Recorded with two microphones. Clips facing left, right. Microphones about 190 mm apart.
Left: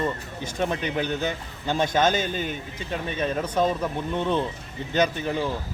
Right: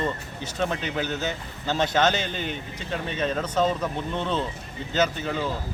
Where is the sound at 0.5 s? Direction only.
15° left (ahead or behind).